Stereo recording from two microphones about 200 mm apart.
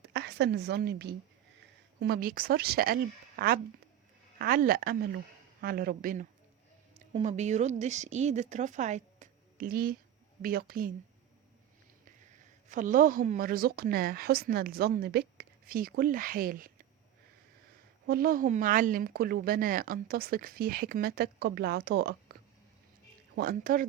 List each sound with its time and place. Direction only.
0.0 s a woman's voice: 55° right (ahead or behind)
7.1 s speech: 35° right (ahead or behind)
12.6 s speech: 40° right (ahead or behind)
18.0 s speech: 50° right (ahead or behind)